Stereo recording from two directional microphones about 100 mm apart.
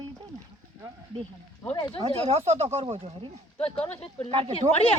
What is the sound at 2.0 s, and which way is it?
Speech, 90° right.